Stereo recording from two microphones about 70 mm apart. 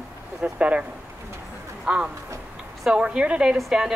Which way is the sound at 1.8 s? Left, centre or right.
Centre.